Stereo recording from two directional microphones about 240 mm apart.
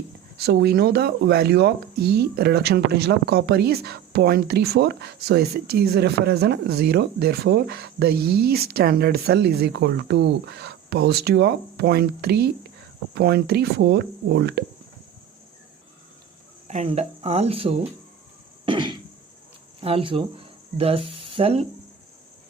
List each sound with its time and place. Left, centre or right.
0.3 s speech: right
16.6 s speech: right
18.6 s cough: centre
19.8 s speech: right